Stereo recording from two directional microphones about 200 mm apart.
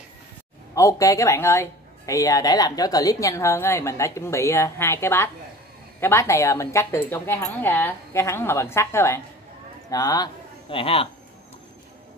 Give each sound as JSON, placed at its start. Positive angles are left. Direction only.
{"t": 0.7, "sound": "speech", "side_deg": 15}